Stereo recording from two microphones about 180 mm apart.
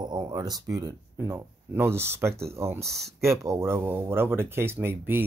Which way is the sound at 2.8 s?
Centre (ahead or behind).